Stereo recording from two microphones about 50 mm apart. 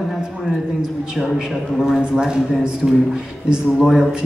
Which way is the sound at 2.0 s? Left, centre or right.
Centre.